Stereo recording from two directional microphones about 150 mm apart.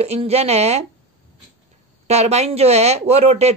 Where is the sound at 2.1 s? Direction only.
45° right (ahead or behind).